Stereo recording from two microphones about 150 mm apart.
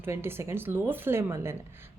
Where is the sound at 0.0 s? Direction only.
15° right (ahead or behind).